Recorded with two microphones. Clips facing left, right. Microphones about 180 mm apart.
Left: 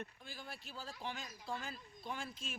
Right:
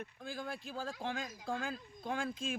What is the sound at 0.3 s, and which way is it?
Speech, 50° right (ahead or behind).